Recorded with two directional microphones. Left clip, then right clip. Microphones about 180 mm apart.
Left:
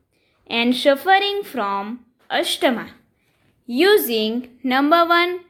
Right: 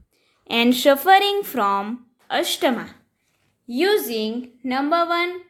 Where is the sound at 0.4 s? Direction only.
5° right (ahead or behind).